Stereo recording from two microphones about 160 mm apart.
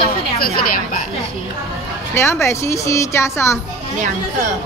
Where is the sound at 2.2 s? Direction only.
15° left (ahead or behind).